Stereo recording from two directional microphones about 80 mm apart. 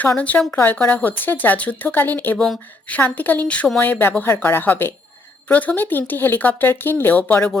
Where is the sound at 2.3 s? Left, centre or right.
Centre.